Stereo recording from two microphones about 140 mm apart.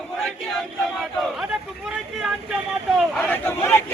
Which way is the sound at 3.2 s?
15° left (ahead or behind).